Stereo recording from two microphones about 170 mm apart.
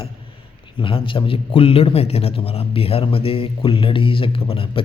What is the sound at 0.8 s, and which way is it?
A man's voice, 30° left (ahead or behind).